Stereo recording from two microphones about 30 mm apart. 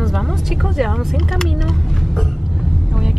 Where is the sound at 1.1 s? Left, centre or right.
Centre.